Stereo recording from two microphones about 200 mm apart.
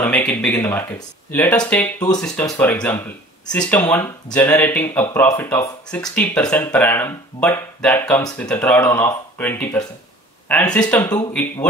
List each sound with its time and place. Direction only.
0.0 s speech: 10° left (ahead or behind)
10.9 s speech: 15° left (ahead or behind)